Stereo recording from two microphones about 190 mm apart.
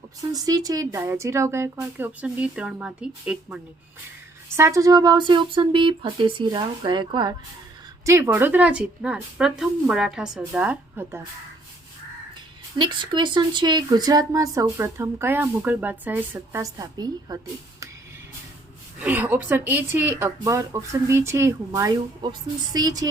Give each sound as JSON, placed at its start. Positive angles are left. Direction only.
{"t": 0.3, "sound": "speech", "side_deg": -20}
{"t": 4.5, "sound": "speech", "side_deg": -15}
{"t": 8.0, "sound": "speech", "side_deg": -10}
{"t": 12.8, "sound": "speech", "side_deg": -25}
{"t": 18.9, "sound": "speech", "side_deg": -10}